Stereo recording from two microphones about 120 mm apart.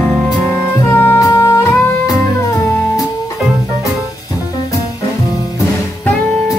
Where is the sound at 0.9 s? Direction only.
15° left (ahead or behind).